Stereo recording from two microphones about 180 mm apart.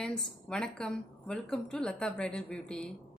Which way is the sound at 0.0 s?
5° left (ahead or behind).